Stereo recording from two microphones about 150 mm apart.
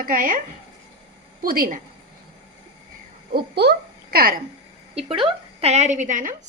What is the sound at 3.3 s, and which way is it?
A child's voice, 90° right.